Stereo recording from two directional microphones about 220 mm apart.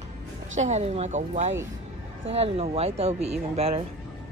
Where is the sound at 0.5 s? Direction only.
30° right (ahead or behind).